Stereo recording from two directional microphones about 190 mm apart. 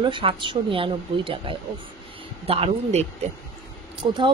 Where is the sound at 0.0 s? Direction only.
25° right (ahead or behind).